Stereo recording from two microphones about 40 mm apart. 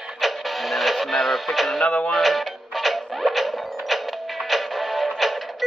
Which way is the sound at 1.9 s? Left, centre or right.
Left.